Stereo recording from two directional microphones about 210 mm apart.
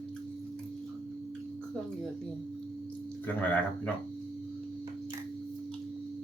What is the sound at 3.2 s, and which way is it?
Speech, 5° left (ahead or behind).